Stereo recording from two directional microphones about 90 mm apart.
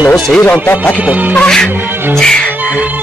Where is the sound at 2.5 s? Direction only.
15° right (ahead or behind).